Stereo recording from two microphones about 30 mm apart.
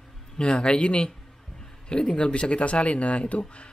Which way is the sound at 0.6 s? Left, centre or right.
Left.